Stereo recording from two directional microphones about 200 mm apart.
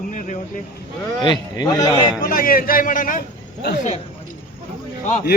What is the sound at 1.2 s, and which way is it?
Speech, 20° left (ahead or behind).